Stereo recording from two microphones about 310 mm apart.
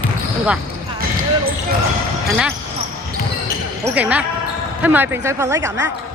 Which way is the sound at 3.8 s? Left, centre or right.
Centre.